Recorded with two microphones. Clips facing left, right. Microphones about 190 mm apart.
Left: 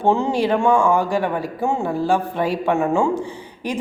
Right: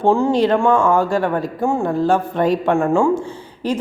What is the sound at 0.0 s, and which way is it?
Speech, 20° left (ahead or behind).